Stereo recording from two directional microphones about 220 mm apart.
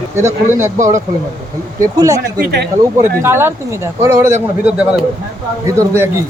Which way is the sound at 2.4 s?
50° right (ahead or behind).